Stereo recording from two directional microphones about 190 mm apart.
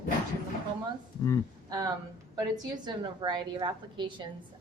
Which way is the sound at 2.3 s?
25° right (ahead or behind).